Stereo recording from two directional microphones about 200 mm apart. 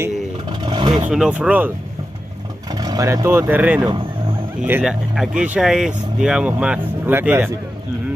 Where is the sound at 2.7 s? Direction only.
20° right (ahead or behind).